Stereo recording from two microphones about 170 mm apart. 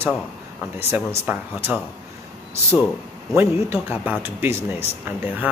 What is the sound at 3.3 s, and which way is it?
Speech, 15° right (ahead or behind).